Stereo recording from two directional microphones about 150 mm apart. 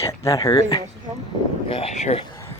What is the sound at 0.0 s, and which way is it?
Speech, 20° left (ahead or behind).